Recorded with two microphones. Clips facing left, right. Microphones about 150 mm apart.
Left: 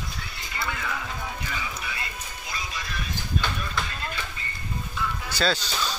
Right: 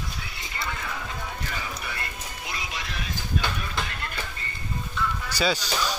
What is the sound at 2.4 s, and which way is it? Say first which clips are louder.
Music: even; 80° right.